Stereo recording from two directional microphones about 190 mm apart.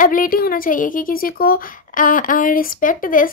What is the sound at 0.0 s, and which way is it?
A woman's voice, 45° left (ahead or behind).